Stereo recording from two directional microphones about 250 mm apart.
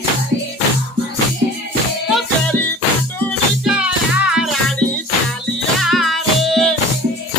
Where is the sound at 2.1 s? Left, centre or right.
Centre.